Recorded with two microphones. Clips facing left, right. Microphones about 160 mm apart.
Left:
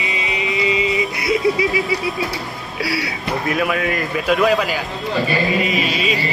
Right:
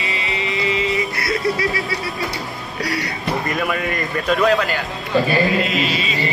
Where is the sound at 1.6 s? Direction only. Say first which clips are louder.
Left 3 dB; 15° left (ahead or behind).